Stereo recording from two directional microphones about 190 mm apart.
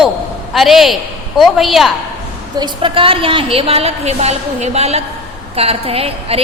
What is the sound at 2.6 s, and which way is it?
A woman's voice, 25° right (ahead or behind).